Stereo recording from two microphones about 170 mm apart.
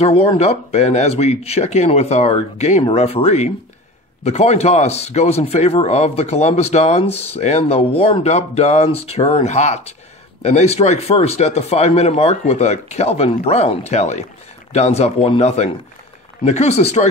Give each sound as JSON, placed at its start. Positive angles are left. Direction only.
{"t": 0.0, "sound": "a man's voice", "side_deg": 35}